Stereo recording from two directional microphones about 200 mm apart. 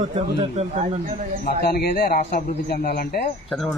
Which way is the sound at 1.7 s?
50° left (ahead or behind).